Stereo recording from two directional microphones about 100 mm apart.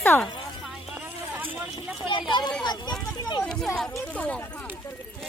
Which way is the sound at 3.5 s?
5° left (ahead or behind).